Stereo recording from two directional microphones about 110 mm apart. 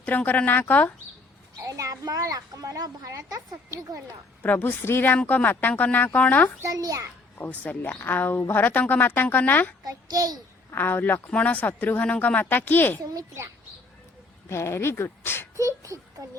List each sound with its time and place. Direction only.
0.0 s speech: 15° left (ahead or behind)
1.6 s a woman's voice: 30° right (ahead or behind)
4.4 s speech: 15° left (ahead or behind)
6.6 s a woman's voice: 35° right (ahead or behind)
7.6 s speech: 15° left (ahead or behind)
9.8 s a child's voice: 35° right (ahead or behind)
10.7 s speech: 20° left (ahead or behind)
13.0 s a woman's voice: 30° right (ahead or behind)
14.5 s speech: 25° left (ahead or behind)
15.6 s a child's voice: 30° right (ahead or behind)